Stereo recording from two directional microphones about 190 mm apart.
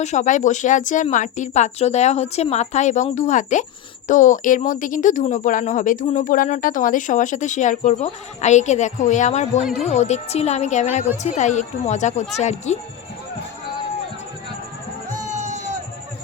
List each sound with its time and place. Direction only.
0.0 s a woman's voice: 40° left (ahead or behind)
15.1 s music: 40° right (ahead or behind)